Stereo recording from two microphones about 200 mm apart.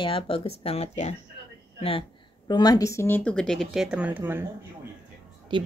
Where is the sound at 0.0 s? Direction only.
25° left (ahead or behind); by 4.5 s 10° right (ahead or behind).